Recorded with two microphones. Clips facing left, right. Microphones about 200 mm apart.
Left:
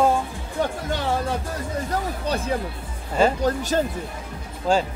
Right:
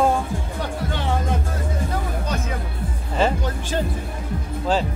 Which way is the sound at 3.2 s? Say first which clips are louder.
Left 3 dB; 40° left (ahead or behind).